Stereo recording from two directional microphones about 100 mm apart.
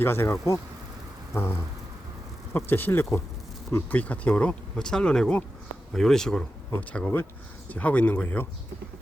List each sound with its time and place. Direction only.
0.0 s speech: 25° left (ahead or behind); by 6.4 s 5° left (ahead or behind)
6.7 s speech: 15° left (ahead or behind)